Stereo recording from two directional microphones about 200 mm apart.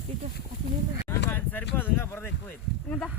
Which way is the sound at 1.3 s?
5° left (ahead or behind).